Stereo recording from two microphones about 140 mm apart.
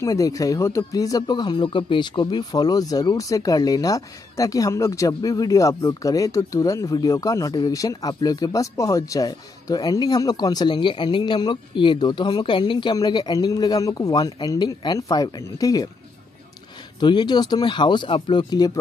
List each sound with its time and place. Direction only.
0.0 s speech: 25° left (ahead or behind)
17.0 s speech: 30° left (ahead or behind)